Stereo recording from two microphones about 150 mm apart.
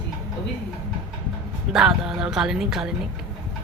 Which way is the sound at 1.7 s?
5° right (ahead or behind).